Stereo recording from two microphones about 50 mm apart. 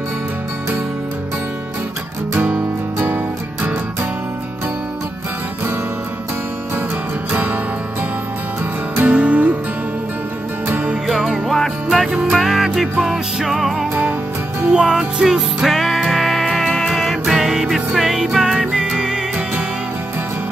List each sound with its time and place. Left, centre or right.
2.3 s music: right
9.0 s music: right
11.1 s music: centre
14.7 s music: centre
15.6 s music: centre
17.2 s music: centre